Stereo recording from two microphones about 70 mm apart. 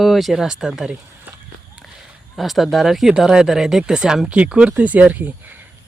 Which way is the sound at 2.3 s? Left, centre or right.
Centre.